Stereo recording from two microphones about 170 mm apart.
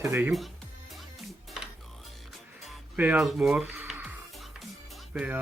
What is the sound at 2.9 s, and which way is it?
Speech, 5° right (ahead or behind).